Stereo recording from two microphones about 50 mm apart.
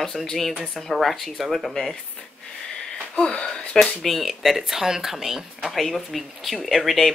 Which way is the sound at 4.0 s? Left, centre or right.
Centre.